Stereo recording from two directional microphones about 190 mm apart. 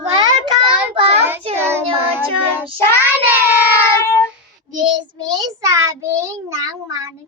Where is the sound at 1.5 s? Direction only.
10° right (ahead or behind).